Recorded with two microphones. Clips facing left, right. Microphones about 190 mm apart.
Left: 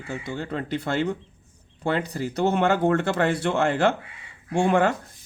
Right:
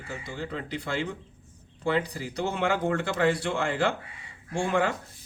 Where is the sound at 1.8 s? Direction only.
55° left (ahead or behind).